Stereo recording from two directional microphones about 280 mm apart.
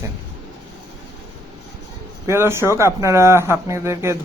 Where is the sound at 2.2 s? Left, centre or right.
Centre.